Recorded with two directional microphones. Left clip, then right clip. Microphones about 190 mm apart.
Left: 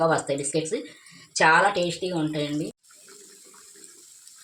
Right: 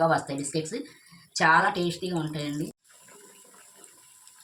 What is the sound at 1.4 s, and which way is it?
Speech, 40° left (ahead or behind).